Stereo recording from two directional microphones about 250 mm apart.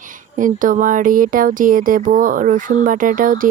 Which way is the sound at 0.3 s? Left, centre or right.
Right.